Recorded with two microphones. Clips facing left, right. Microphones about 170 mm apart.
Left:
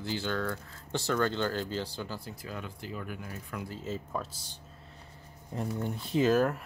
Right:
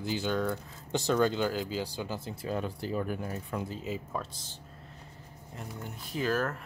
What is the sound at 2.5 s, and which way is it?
Speech, 35° right (ahead or behind).